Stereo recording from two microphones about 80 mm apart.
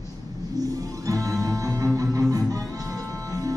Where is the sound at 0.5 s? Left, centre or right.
Right.